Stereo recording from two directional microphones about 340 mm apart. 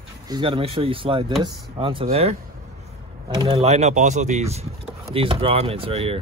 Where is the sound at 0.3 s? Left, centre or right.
Centre.